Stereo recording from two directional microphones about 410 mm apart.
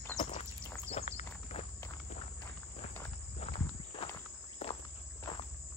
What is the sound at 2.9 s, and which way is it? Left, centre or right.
Walk, centre.